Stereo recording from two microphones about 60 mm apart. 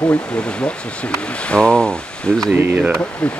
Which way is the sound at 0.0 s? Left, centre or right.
Left.